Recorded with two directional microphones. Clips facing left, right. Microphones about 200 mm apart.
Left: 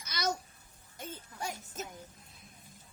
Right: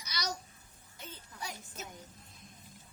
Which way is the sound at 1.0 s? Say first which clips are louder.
Left 5 dB; 50° left (ahead or behind).